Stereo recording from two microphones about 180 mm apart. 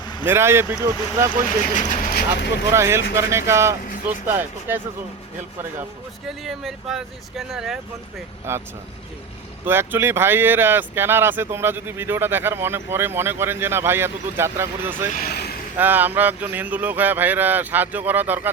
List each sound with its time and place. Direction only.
0.3 s speech: 15° right (ahead or behind)
1.8 s speech: 50° left (ahead or behind)
2.7 s speech: 15° right (ahead or behind)
6.2 s speech: centre (ahead or behind)
9.6 s speech: 10° right (ahead or behind)
15.1 s speech: 60° left (ahead or behind)
15.8 s speech: 10° right (ahead or behind)